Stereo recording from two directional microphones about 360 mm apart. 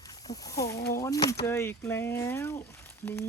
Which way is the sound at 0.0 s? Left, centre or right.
Centre.